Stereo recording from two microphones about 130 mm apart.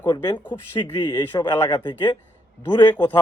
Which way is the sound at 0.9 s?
35° left (ahead or behind).